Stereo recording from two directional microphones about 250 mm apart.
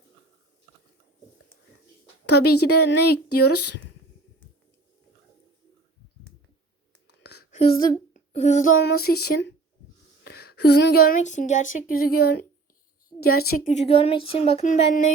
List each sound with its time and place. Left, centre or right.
2.4 s a woman's voice: left
3.0 s a sound: left
7.2 s whispering: left
7.5 s speech: left
8.1 s child singing: left
9.0 s speech: left
13.1 s a woman's voice: left
13.4 s speech: left